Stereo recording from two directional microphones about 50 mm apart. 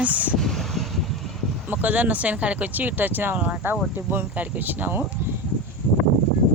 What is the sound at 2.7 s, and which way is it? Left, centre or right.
Speech, right.